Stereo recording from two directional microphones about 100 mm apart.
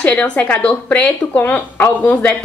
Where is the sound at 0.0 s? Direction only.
15° left (ahead or behind).